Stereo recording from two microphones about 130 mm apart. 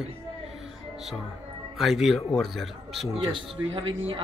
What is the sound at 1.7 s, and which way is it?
Speech, centre (ahead or behind).